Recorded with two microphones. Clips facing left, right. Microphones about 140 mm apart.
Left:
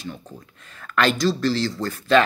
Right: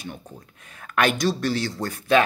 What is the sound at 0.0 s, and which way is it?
Speech, 60° right (ahead or behind).